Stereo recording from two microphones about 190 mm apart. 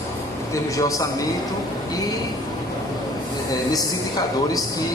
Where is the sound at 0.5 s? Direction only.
15° left (ahead or behind).